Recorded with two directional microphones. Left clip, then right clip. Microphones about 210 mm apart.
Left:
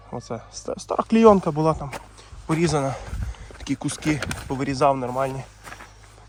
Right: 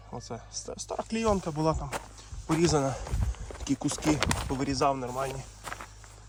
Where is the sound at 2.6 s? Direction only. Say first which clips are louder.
Left 3 dB; 15° right (ahead or behind).